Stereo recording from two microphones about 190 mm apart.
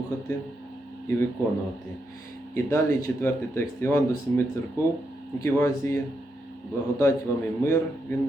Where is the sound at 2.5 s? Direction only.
15° left (ahead or behind).